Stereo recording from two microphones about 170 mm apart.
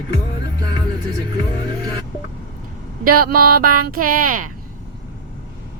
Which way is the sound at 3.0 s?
60° right (ahead or behind).